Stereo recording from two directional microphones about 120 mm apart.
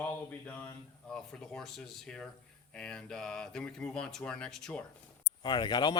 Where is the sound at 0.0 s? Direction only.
15° left (ahead or behind).